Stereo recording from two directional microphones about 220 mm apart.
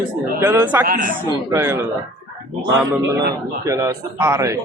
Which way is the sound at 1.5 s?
10° right (ahead or behind).